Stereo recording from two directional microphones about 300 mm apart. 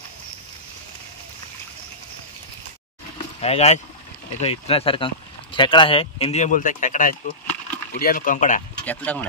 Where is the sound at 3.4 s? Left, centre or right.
Left.